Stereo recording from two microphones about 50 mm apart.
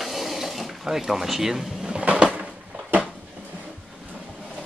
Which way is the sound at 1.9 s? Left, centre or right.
Right.